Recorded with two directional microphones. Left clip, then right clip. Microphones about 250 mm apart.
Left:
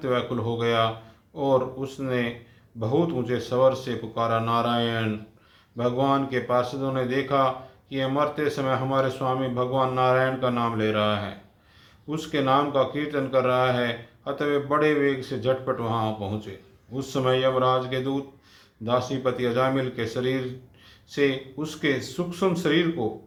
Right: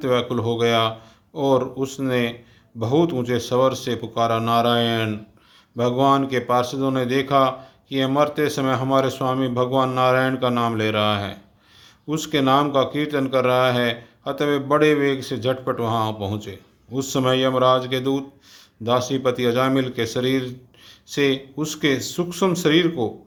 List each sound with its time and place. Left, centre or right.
0.0 s speech: right